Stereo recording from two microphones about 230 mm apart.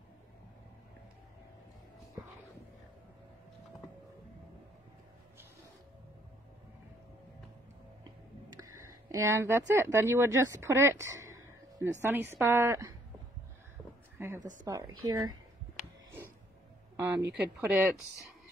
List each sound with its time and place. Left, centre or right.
8.7 s speech: centre
11.3 s a sound: centre
12.0 s speech: centre
14.1 s a sound: centre
14.6 s speech: centre
17.0 s speech: centre